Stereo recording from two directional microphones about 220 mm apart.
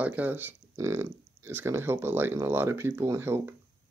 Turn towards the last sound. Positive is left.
turn(degrees=-10)  # may be behind; listen again after turning